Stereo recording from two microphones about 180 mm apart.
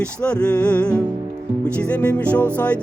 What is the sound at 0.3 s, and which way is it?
Music, 5° left (ahead or behind).